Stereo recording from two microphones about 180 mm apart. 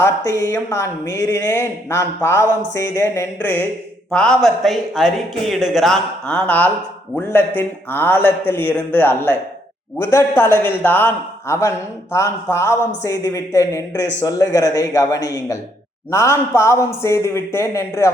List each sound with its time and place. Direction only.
0.0 s speech: 20° left (ahead or behind)